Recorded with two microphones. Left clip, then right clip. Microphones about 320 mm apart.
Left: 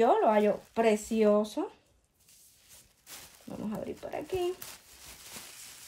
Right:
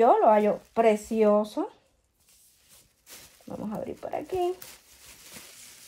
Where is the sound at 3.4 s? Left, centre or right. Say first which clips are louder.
Right 4 dB; centre.